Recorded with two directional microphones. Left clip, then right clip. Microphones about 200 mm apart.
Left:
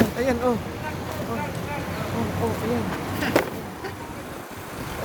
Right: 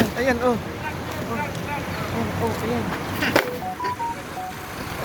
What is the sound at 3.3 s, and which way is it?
Music, 15° left (ahead or behind).